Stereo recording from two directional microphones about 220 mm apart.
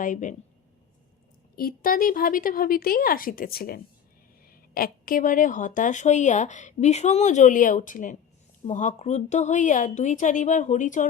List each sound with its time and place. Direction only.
0.0 s speech: 35° left (ahead or behind)
1.5 s speech: 40° left (ahead or behind)